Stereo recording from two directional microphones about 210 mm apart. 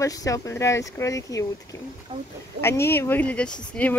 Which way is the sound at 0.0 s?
15° left (ahead or behind).